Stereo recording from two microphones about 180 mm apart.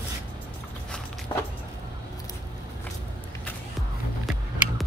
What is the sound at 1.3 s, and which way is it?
Vehicle, 25° left (ahead or behind).